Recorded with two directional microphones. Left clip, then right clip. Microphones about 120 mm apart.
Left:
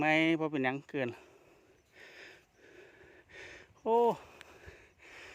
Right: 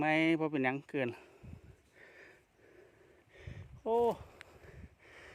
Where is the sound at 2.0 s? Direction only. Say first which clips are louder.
Left 5 dB; 25° left (ahead or behind).